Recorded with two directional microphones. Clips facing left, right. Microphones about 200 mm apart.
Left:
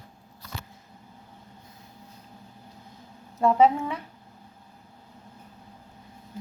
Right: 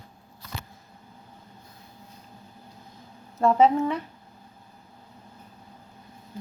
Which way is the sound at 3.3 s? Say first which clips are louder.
Right 1 dB; 10° left (ahead or behind).